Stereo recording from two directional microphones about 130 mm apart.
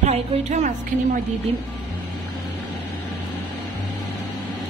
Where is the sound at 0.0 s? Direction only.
65° right (ahead or behind).